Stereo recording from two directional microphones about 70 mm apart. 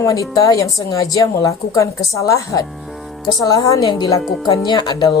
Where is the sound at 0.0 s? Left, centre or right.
Left.